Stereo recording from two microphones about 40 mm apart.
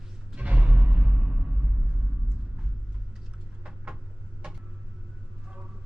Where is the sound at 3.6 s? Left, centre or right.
Right.